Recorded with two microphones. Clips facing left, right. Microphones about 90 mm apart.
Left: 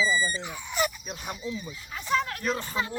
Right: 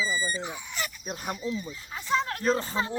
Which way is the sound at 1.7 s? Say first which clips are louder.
Left 2 dB; 25° right (ahead or behind).